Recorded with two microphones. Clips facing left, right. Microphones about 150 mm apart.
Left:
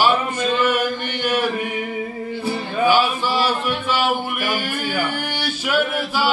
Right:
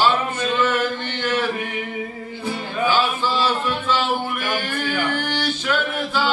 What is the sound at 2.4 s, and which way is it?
Music, 15° left (ahead or behind).